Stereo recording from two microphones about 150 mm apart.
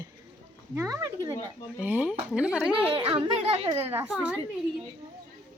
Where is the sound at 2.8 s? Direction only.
35° right (ahead or behind).